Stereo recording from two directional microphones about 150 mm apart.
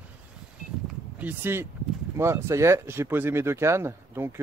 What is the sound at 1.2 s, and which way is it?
Speech, 10° right (ahead or behind).